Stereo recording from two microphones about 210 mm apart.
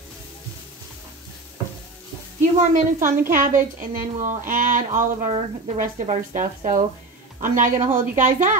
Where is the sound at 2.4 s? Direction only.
35° right (ahead or behind).